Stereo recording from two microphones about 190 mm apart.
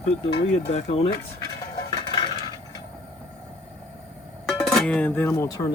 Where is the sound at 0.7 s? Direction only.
35° left (ahead or behind).